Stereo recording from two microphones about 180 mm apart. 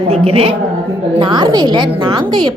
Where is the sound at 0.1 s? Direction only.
35° right (ahead or behind).